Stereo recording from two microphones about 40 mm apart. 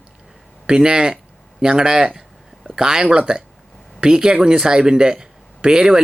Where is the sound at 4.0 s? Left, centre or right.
Centre.